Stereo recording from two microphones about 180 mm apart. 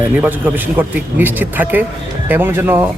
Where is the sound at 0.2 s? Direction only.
10° right (ahead or behind).